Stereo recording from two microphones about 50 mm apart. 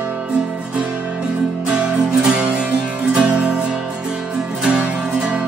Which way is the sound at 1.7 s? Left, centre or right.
Centre.